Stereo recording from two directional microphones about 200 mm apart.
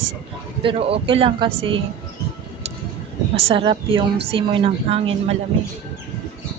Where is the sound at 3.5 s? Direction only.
25° right (ahead or behind).